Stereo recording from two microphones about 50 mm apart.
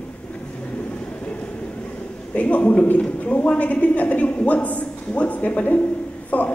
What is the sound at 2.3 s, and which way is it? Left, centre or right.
A woman's voice, left.